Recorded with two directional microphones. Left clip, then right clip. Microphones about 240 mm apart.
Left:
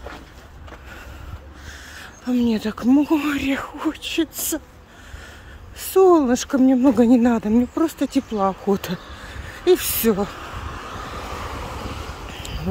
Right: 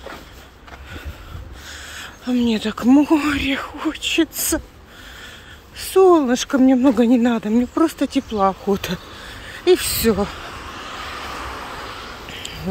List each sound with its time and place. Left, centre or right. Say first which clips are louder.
1.7 s speech: right 5 dB; centre
5.8 s speech: right 1 dB; centre
10.9 s vehicle: right 4 dB; left
12.3 s a sound: right 2 dB; centre